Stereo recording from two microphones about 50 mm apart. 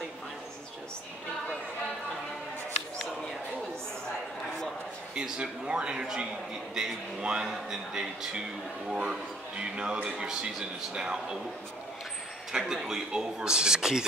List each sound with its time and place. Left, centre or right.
5.1 s a man's voice: centre
12.5 s a man's voice: centre